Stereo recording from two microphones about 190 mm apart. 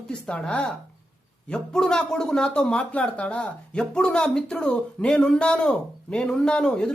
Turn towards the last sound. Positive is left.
turn(degrees=5)  # may be behind; listen again after turning